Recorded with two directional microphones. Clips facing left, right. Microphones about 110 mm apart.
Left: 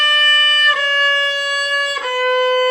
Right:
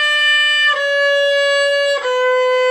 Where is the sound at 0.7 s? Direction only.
5° right (ahead or behind).